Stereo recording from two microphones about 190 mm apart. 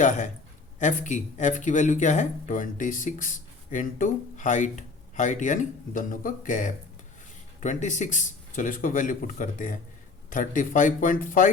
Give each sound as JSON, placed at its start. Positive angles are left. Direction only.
{"t": 0.0, "sound": "a man's voice", "side_deg": 40}